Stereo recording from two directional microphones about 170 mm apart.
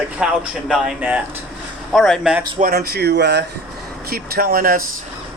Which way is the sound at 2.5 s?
60° right (ahead or behind).